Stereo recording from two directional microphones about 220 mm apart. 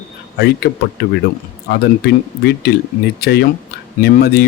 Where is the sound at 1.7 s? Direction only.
50° left (ahead or behind).